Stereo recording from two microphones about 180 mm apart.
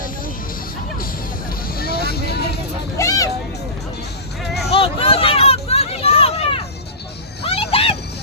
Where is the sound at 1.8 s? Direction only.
60° left (ahead or behind).